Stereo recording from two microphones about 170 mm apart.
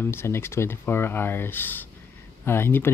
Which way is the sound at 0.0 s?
15° left (ahead or behind).